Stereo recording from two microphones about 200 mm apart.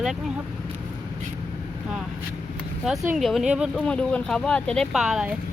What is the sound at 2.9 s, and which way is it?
Speech, 5° right (ahead or behind).